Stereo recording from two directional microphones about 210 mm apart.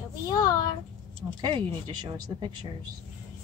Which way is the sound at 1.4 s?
25° right (ahead or behind).